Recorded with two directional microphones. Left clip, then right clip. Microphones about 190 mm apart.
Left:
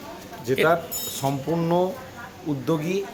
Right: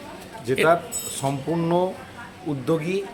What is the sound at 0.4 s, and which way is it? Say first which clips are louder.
Speech: right 1 dB; 5° right (ahead or behind).